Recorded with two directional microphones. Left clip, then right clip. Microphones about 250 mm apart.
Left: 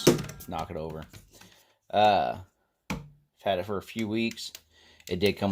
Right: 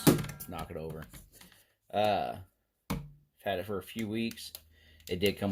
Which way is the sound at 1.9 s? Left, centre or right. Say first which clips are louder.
Left 7 dB; left.